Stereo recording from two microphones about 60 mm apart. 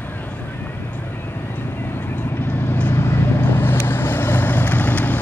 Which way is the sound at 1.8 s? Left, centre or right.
Left.